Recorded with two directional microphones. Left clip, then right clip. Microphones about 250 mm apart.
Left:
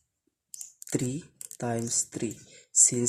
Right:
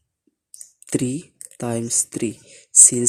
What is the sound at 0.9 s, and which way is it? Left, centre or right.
Speech, centre.